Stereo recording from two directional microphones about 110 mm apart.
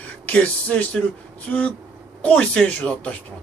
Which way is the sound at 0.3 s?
15° left (ahead or behind).